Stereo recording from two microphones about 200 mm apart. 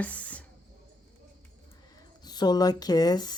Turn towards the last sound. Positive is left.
turn(degrees=20)  # may be behind; listen again after turning